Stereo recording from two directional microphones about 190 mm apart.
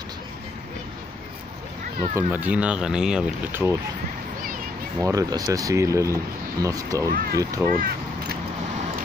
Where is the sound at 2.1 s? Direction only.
10° right (ahead or behind).